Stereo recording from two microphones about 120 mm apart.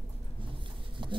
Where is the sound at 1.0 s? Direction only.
40° right (ahead or behind).